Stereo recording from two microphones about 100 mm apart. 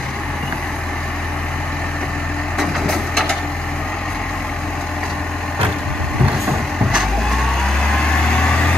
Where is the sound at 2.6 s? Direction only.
5° left (ahead or behind).